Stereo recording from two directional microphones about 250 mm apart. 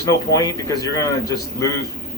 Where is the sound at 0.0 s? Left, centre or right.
Centre.